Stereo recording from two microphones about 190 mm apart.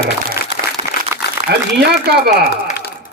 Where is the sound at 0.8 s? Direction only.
25° right (ahead or behind).